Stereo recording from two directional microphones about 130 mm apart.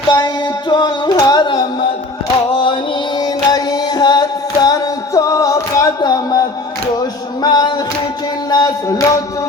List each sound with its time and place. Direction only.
0.7 s music: 35° left (ahead or behind)
3.2 s singing: 30° left (ahead or behind)
7.4 s a capella: 30° left (ahead or behind)
8.4 s music: 30° left (ahead or behind)